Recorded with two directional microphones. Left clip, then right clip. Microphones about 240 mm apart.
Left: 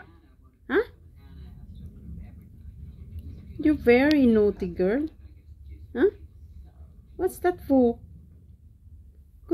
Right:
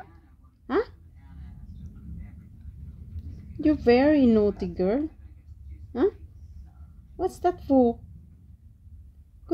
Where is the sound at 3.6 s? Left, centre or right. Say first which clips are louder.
Even; right.